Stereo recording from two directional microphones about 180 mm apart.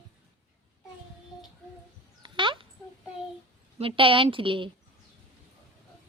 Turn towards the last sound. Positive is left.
turn(degrees=-30)  # may be behind; listen again after turning